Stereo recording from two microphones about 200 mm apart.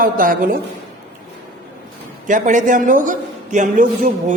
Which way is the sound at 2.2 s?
40° right (ahead or behind).